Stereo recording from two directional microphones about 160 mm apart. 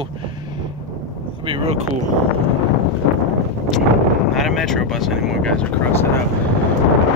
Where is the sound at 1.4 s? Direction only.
35° right (ahead or behind).